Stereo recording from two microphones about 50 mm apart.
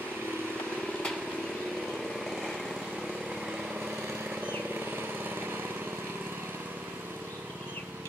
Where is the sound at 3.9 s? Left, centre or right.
Right.